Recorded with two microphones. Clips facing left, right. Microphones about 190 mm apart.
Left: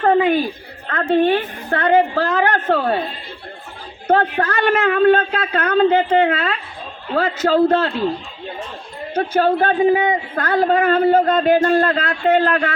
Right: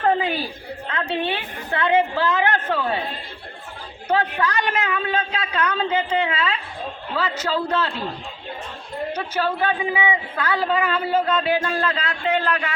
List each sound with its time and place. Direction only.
0.9 s a woman's voice: 50° left (ahead or behind)
4.1 s a woman's voice: 45° left (ahead or behind)
9.1 s a woman's voice: 50° left (ahead or behind)